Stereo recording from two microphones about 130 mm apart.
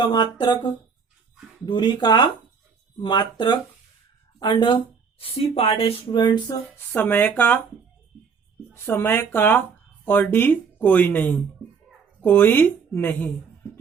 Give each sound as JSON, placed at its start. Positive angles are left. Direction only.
{"t": 0.0, "sound": "speech", "side_deg": 35}
{"t": 6.9, "sound": "speech", "side_deg": 15}
{"t": 8.7, "sound": "speech", "side_deg": 20}